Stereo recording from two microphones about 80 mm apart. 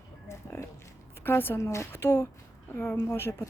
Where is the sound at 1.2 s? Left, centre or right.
Left.